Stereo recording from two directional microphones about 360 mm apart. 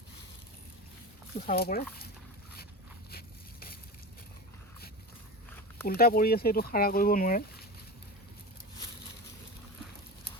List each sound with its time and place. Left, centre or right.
1.5 s speech: left
3.1 s a sound: left
5.8 s speech: left